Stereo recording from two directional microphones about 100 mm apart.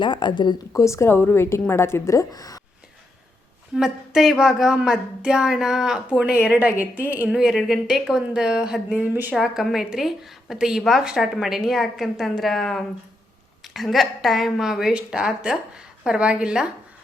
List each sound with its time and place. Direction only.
0.0 s speech: 50° left (ahead or behind)
0.7 s a woman's voice: 30° left (ahead or behind)
3.8 s a woman's voice: 5° right (ahead or behind)
7.3 s a woman's voice: 5° right (ahead or behind)